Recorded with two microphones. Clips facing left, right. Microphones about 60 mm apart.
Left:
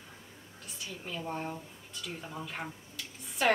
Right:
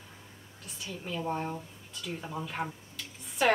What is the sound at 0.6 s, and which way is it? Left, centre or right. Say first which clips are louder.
Speech: right 2 dB; centre.